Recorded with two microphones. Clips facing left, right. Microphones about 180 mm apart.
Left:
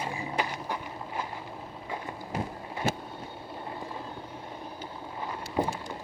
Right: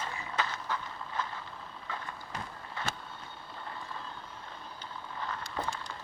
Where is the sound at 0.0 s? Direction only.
15° left (ahead or behind).